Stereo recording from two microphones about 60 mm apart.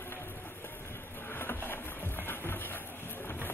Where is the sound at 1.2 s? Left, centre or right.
Left.